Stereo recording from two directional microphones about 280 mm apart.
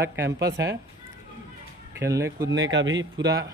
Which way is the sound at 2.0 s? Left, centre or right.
Centre.